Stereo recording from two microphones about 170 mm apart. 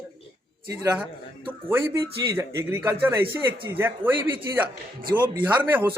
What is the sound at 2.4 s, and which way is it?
A man's voice, 15° right (ahead or behind).